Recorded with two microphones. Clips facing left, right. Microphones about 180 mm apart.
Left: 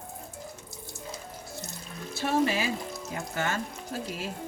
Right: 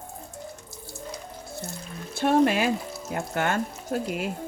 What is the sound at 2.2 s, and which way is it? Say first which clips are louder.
Speech: right 6 dB; 55° right (ahead or behind).